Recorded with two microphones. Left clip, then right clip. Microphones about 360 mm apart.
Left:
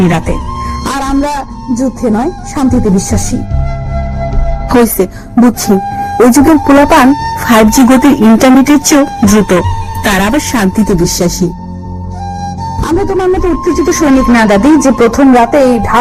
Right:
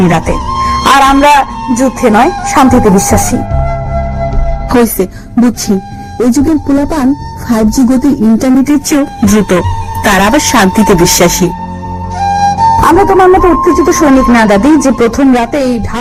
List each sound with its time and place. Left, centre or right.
0.0 s speech: centre
4.7 s a woman's voice: centre